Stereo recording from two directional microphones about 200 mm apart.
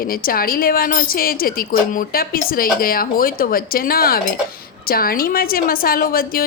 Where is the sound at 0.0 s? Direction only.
45° left (ahead or behind).